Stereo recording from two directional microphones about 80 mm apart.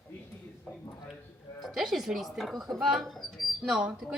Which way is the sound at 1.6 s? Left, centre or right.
Centre.